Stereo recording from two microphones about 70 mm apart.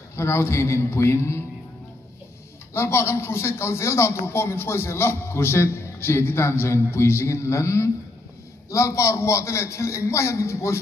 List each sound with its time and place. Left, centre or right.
0.1 s a man's voice: left
2.7 s a man's voice: left